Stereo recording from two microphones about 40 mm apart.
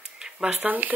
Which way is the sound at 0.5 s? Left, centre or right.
Right.